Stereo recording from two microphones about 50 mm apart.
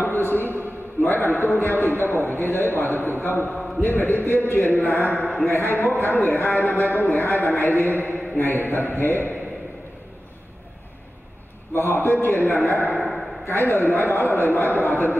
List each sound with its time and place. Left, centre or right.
0.0 s a sound: left
2.1 s a man's voice: left
3.5 s a man's voice: centre
3.8 s a man's voice: left
11.7 s a man's voice: left